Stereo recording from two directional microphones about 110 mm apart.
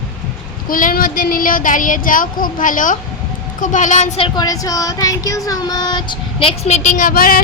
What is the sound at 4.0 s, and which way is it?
Speech, 90° left.